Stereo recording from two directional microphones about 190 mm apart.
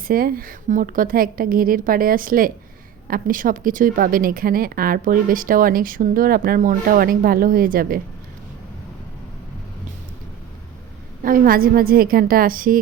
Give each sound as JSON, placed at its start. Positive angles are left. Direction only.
{"t": 0.1, "sound": "speech", "side_deg": -50}
{"t": 11.2, "sound": "speech", "side_deg": -45}